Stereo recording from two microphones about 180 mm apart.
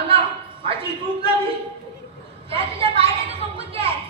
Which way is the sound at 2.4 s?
30° right (ahead or behind).